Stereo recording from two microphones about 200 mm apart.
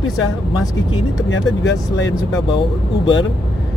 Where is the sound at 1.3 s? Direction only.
65° left (ahead or behind).